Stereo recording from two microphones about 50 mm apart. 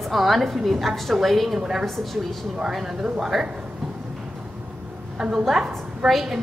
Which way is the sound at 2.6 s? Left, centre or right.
Centre.